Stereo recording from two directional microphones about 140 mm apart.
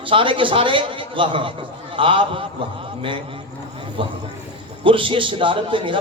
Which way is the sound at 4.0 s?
40° right (ahead or behind).